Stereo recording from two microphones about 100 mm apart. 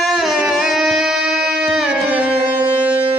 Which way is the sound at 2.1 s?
15° right (ahead or behind).